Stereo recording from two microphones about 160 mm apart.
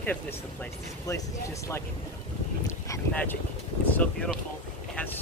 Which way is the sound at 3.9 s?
5° left (ahead or behind).